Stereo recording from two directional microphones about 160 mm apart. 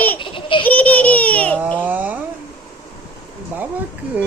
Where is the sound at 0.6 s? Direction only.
10° left (ahead or behind).